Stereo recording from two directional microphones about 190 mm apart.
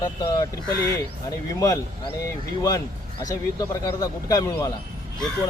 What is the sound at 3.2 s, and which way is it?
Speech, 20° left (ahead or behind).